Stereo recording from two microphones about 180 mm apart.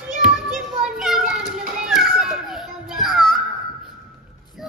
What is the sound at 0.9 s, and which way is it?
Children playing, centre (ahead or behind).